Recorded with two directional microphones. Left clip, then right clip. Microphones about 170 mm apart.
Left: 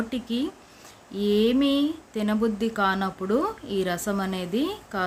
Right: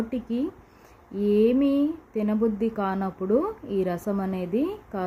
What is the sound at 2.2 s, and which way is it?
Speech, 10° right (ahead or behind).